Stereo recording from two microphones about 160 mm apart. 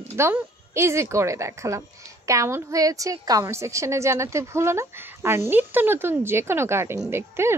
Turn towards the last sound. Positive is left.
turn(degrees=-15)  # may be behind; listen again after turning